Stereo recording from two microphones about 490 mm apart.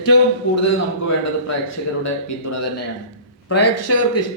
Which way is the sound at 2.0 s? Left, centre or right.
Left.